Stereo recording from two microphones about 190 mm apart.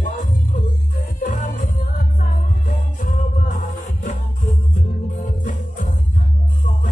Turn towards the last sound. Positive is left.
turn(degrees=40)  # may be behind; listen again after turning